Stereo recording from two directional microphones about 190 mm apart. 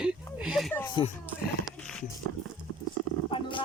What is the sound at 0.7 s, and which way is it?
Speech, 25° left (ahead or behind).